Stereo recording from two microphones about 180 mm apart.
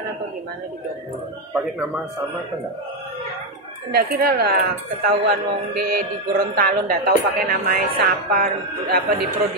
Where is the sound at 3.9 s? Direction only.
60° right (ahead or behind).